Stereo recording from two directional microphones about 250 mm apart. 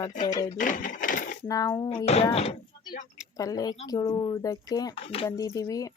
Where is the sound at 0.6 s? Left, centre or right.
Left.